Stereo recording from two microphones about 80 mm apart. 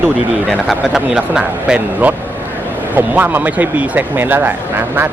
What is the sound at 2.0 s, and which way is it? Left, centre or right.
Speech, right.